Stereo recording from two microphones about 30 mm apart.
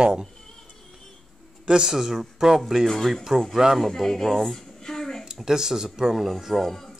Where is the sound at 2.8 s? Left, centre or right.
Centre.